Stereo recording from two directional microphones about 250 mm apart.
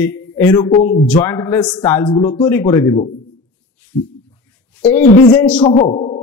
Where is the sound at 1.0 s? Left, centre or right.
Centre.